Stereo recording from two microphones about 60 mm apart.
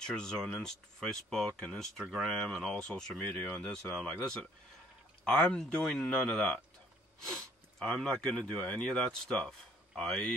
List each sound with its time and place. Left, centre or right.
0.0 s speech: centre
2.0 s speech: centre
2.7 s speech: centre